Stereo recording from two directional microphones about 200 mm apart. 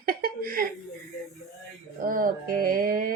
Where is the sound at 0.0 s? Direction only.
50° right (ahead or behind).